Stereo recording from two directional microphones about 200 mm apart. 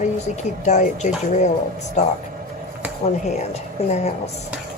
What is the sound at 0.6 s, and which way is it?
A woman's voice, 35° left (ahead or behind).